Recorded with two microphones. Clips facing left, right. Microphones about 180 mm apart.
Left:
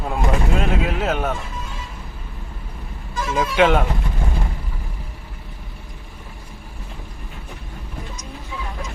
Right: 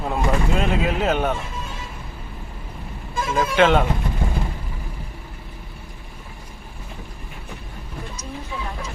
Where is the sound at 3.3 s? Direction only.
10° left (ahead or behind).